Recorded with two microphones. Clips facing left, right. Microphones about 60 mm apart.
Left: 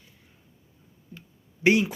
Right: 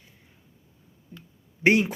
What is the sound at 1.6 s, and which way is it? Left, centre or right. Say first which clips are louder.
Speech: right 1 dB; right.